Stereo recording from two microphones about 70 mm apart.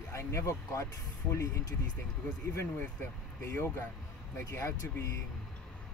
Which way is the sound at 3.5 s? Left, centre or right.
Left.